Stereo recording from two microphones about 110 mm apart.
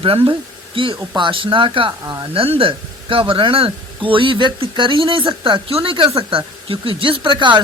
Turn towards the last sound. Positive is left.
turn(degrees=-50)  # may be behind; listen again after turning